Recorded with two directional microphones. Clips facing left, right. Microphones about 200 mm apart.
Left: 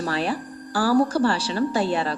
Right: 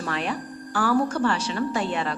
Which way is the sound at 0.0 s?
35° left (ahead or behind).